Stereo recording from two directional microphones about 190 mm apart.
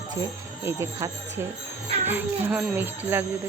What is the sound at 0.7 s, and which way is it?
Speech, 15° right (ahead or behind).